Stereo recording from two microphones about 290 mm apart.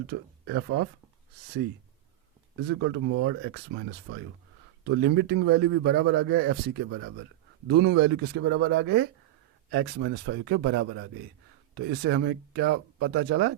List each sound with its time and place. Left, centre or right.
0.1 s a man's voice: right
2.8 s a man's voice: right